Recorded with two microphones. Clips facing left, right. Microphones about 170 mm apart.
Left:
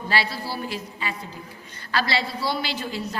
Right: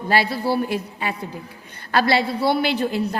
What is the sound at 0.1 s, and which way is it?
A woman's voice, 55° right (ahead or behind).